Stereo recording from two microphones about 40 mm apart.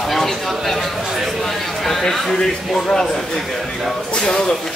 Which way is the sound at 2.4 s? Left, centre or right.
Centre.